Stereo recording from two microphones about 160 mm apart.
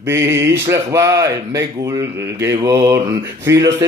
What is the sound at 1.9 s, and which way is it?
Speech, 20° right (ahead or behind).